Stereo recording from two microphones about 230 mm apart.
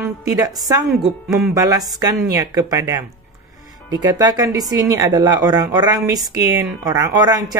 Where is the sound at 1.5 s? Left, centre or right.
Centre.